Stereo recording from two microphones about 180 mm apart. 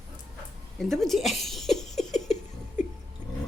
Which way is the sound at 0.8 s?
Centre (ahead or behind).